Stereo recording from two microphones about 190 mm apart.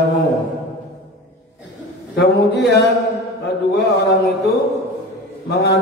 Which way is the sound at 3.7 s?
60° left (ahead or behind).